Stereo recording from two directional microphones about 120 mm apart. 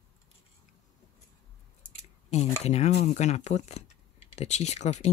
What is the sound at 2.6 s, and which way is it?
Speech, 65° left (ahead or behind).